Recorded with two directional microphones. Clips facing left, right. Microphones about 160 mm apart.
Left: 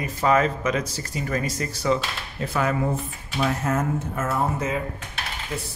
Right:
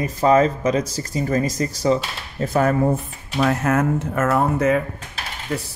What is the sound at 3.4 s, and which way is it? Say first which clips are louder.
Speech: right 5 dB; 70° right (ahead or behind).